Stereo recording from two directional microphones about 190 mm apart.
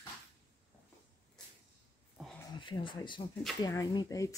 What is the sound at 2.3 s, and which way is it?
Speech, 20° left (ahead or behind).